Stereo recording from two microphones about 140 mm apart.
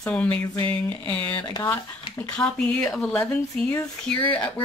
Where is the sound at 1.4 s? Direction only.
30° left (ahead or behind).